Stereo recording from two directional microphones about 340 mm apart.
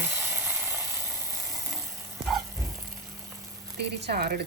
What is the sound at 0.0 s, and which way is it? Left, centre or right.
Ratchet, centre.